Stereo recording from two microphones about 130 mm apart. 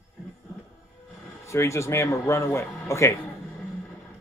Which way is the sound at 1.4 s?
25° left (ahead or behind).